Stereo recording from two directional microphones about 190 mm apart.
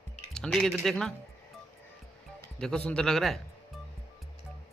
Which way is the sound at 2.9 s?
5° left (ahead or behind).